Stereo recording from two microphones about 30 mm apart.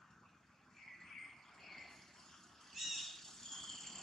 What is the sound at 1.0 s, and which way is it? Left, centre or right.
Cricket, centre.